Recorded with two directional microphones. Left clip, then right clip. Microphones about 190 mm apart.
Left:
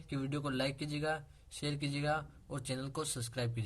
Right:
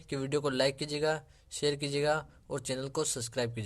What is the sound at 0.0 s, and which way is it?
Speech, 40° right (ahead or behind).